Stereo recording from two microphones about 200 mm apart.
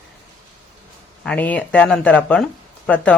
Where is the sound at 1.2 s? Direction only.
5° left (ahead or behind).